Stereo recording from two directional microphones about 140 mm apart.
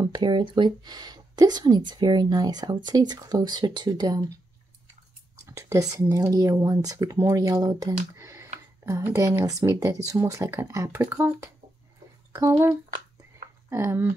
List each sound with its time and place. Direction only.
0.0 s speech: 30° right (ahead or behind)
5.4 s speech: 20° right (ahead or behind)
8.2 s a sound: 20° right (ahead or behind)
8.8 s speech: 20° right (ahead or behind)